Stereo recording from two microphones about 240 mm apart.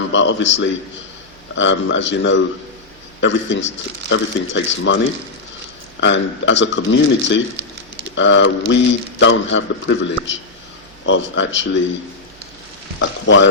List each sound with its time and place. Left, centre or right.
0.1 s speech: left
6.0 s speech: left
13.0 s speech: left